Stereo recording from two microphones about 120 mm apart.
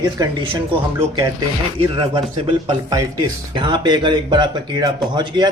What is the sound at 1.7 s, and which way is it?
Speech, 45° right (ahead or behind).